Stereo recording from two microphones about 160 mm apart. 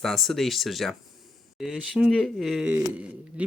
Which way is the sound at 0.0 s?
Centre (ahead or behind).